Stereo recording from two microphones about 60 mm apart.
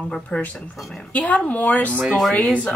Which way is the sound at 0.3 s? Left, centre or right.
Centre.